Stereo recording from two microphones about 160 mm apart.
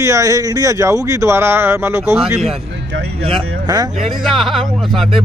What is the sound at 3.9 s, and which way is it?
Speech, 50° right (ahead or behind).